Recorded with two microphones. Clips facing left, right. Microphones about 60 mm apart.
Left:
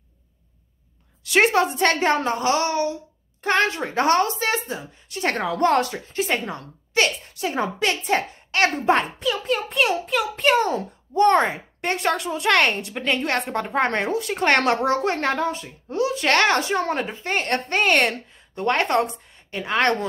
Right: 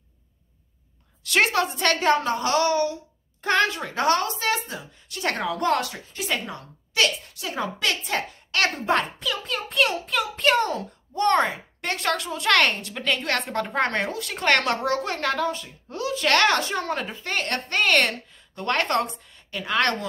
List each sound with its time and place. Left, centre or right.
1.2 s a woman's voice: left
10.7 s a woman's voice: left